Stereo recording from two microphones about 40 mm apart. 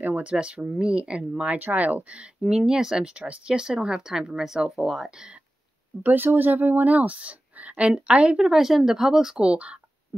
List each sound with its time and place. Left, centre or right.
0.2 s speech: right
1.5 s speech: right
2.5 s speech: centre
3.1 s speech: right; by 5.1 s centre
5.1 s speech: right
6.1 s speech: right
8.5 s speech: centre
9.4 s speech: right